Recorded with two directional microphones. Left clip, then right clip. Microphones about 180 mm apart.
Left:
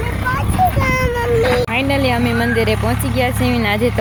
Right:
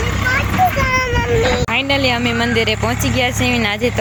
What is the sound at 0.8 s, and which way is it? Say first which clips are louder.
Cat: right 1 dB; 15° left (ahead or behind).